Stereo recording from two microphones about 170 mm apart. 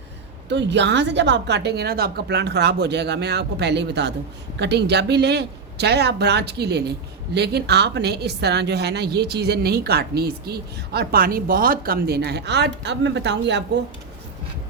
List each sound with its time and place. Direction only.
0.4 s a woman's voice: 90° right